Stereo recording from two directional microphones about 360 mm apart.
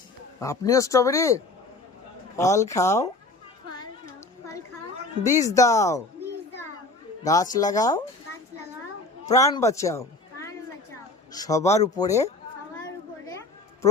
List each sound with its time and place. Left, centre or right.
0.3 s a man's voice: centre
5.2 s a man's voice: centre
7.5 s a man's voice: centre
9.3 s a man's voice: centre